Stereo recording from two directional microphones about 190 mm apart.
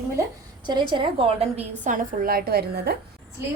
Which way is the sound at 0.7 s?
25° right (ahead or behind).